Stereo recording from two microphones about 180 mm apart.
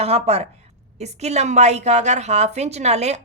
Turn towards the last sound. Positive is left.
turn(degrees=-35)  # may be behind; listen again after turning